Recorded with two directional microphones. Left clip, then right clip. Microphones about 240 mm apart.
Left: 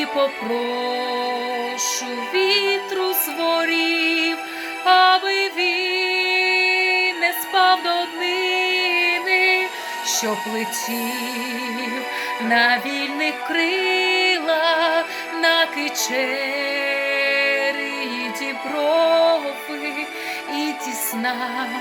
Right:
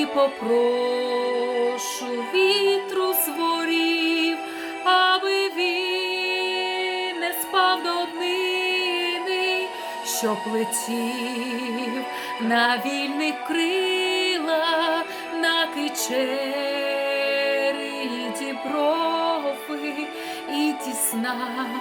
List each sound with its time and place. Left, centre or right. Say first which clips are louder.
2.3 s music: left 1 dB; centre
12.5 s music: left 3 dB; centre
18.8 s music: left 6 dB; centre